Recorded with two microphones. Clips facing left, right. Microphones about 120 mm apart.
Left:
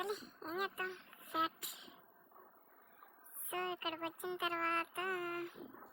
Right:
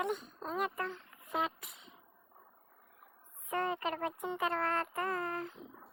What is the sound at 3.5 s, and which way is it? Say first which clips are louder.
Child singing: right 7 dB; 45° right (ahead or behind).